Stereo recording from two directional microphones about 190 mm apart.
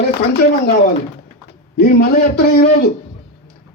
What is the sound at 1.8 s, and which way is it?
Speech, 55° left (ahead or behind).